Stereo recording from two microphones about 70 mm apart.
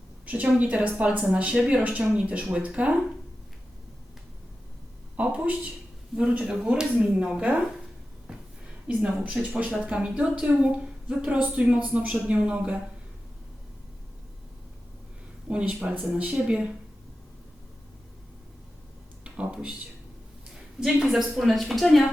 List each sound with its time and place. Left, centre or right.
0.3 s speech: centre
5.1 s speech: centre
8.3 s a sound: centre
9.0 s speech: centre
15.4 s speech: centre
19.2 s speech: centre
20.7 s a woman's voice: centre